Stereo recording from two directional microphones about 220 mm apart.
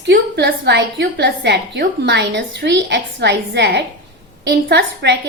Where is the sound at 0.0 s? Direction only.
50° right (ahead or behind).